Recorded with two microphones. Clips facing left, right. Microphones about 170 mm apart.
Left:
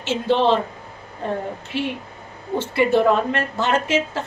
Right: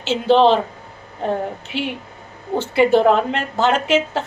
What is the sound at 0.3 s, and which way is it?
Speech, 90° right.